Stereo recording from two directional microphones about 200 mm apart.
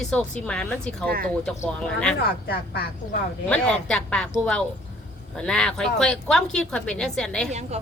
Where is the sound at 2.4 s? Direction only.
50° left (ahead or behind).